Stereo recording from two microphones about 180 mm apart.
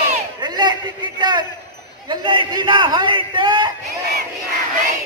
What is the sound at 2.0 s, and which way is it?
A man's voice, 25° right (ahead or behind).